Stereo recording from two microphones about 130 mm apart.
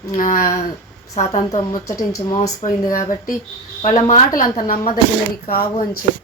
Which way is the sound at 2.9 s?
90° left.